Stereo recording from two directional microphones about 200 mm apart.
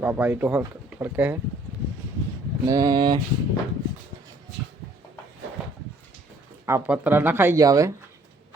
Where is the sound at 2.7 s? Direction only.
20° right (ahead or behind).